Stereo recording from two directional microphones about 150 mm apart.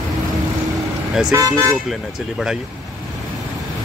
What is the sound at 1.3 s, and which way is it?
Speech, 20° right (ahead or behind).